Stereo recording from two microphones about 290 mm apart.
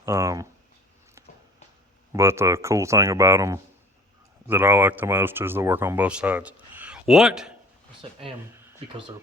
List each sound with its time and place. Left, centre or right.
0.0 s speech: centre
2.1 s speech: centre
8.0 s speech: centre
8.5 s speech: centre